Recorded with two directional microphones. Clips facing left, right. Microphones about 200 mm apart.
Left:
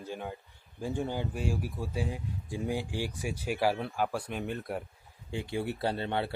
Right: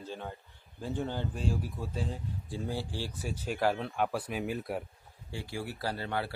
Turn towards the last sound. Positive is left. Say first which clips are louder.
# left 3 dB
turn(degrees=25)  # may be behind; listen again after turning